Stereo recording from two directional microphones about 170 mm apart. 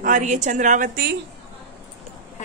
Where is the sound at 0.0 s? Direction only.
45° right (ahead or behind).